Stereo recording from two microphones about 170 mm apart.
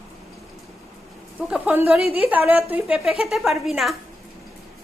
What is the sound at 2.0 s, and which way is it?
Speech, 35° left (ahead or behind).